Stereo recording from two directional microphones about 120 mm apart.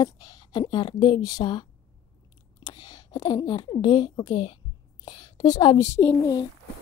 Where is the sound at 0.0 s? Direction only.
30° left (ahead or behind).